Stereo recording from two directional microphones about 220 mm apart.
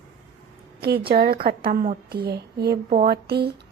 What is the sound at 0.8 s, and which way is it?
A woman's voice, 45° right (ahead or behind).